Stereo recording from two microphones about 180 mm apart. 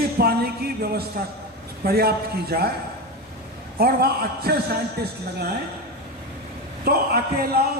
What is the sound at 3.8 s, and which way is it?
Speech, 60° right (ahead or behind).